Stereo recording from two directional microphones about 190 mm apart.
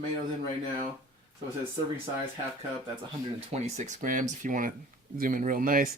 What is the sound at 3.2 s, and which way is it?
Speech, 35° right (ahead or behind).